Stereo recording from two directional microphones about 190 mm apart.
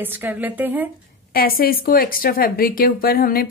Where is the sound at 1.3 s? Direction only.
50° left (ahead or behind).